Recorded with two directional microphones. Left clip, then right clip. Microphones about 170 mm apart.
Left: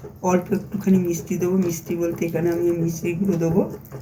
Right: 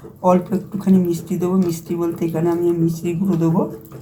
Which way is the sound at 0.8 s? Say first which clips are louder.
Right 4 dB; 40° right (ahead or behind).